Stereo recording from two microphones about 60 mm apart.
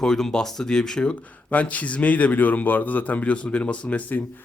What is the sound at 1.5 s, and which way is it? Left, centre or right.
A man's voice, left.